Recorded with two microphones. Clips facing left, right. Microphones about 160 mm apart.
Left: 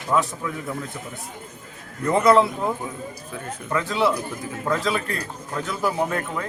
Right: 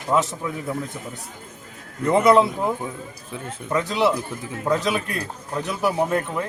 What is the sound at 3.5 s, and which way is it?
A man's voice, 20° right (ahead or behind).